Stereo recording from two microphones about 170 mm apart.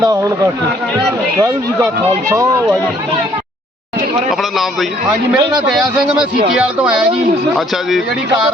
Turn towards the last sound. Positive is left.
turn(degrees=-5)  # may be behind; listen again after turning